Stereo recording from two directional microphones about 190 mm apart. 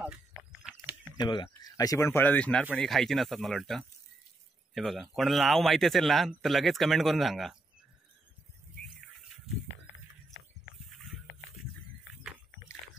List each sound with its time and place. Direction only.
1.1 s a man's voice: 25° left (ahead or behind); by 7.5 s centre (ahead or behind)